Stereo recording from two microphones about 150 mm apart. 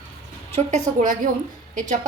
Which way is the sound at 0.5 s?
55° right (ahead or behind).